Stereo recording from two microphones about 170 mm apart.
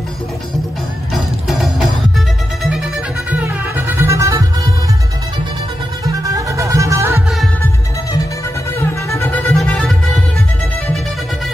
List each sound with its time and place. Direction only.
1.1 s music: centre (ahead or behind); by 4.5 s 20° right (ahead or behind)
6.0 s music: 20° right (ahead or behind)
8.7 s music: 15° left (ahead or behind)
9.5 s music: 5° left (ahead or behind)